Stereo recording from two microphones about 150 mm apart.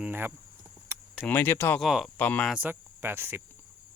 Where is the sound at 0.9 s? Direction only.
15° right (ahead or behind).